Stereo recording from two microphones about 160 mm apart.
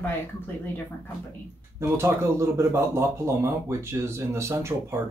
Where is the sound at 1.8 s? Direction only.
15° right (ahead or behind).